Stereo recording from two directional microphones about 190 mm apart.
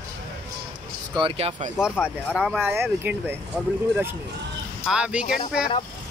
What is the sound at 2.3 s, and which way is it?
Speech, centre (ahead or behind).